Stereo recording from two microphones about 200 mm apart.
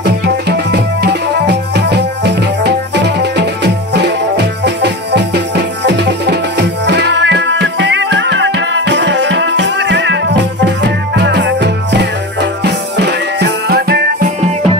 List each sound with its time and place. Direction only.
0.0 s music: 55° right (ahead or behind)